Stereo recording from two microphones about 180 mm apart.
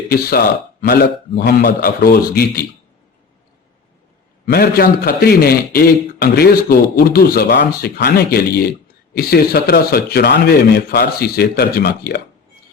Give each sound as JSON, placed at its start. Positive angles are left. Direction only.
{"t": 0.1, "sound": "a man's voice", "side_deg": 60}
{"t": 4.4, "sound": "a man's voice", "side_deg": 60}